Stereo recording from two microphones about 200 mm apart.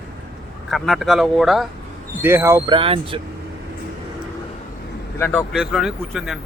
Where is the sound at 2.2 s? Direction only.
10° right (ahead or behind).